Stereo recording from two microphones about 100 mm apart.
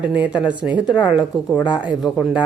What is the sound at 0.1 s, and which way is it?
Speech, 15° right (ahead or behind).